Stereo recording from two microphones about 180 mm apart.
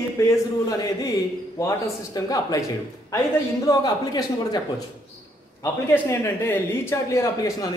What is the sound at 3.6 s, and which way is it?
Speech, 20° left (ahead or behind).